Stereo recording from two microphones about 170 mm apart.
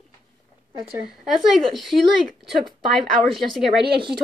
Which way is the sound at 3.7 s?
75° right (ahead or behind).